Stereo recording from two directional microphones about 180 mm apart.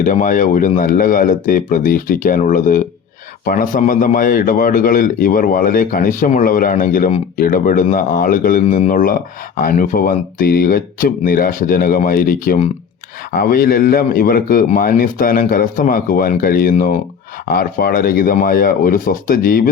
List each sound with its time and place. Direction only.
0.0 s a man's voice: 50° left (ahead or behind)